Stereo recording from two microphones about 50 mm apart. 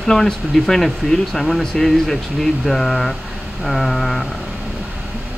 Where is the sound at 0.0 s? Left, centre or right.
Centre.